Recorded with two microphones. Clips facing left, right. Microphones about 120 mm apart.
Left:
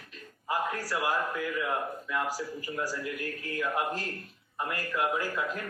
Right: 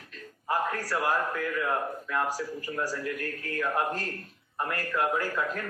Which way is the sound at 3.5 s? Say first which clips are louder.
Right 2 dB; 35° right (ahead or behind).